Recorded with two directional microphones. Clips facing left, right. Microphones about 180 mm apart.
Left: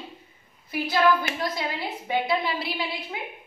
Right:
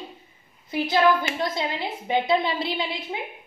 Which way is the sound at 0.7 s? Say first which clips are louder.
Right 2 dB; 25° right (ahead or behind).